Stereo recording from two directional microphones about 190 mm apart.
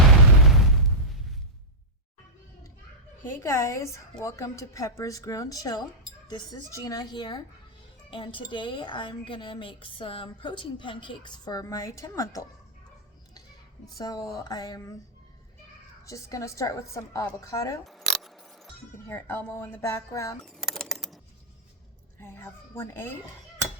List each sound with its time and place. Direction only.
3.2 s a woman's voice: 15° left (ahead or behind)
13.8 s a woman's voice: 20° left (ahead or behind)
16.0 s speech: 15° left (ahead or behind)
17.8 s camera: centre (ahead or behind)
19.0 s speech: 10° left (ahead or behind)
20.4 s a sound: centre (ahead or behind)
22.2 s speech: 10° left (ahead or behind)